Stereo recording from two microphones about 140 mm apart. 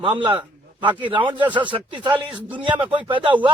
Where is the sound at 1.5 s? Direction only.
35° right (ahead or behind).